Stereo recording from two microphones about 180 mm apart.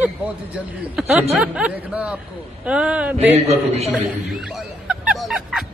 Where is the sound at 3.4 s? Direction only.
35° right (ahead or behind).